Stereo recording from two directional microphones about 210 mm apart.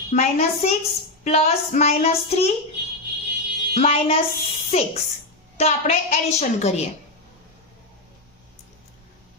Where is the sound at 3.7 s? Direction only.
30° left (ahead or behind).